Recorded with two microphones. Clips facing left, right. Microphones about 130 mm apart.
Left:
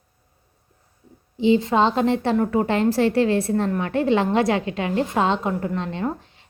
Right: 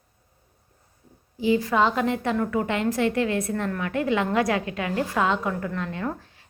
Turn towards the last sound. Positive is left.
turn(degrees=20)  # may be behind; listen again after turning